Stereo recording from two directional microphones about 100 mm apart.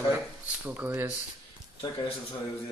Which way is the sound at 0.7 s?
20° right (ahead or behind).